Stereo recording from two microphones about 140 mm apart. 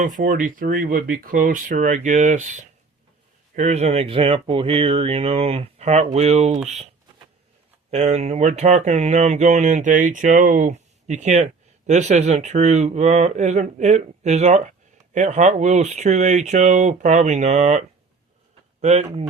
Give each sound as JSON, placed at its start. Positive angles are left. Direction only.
{"t": 0.0, "sound": "speech", "side_deg": -70}
{"t": 7.9, "sound": "speech", "side_deg": -50}